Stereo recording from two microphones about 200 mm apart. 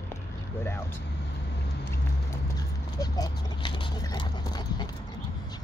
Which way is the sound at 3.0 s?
20° left (ahead or behind).